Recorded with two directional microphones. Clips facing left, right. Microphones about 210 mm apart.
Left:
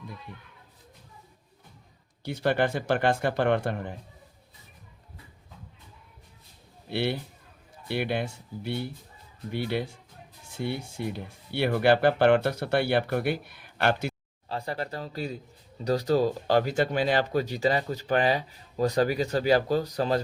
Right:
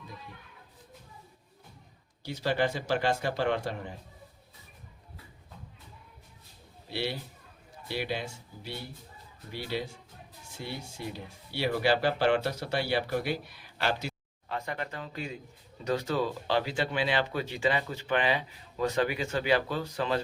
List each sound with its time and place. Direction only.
2.2 s speech: 55° left (ahead or behind)
6.9 s speech: 55° left (ahead or behind)
14.5 s speech: 35° left (ahead or behind)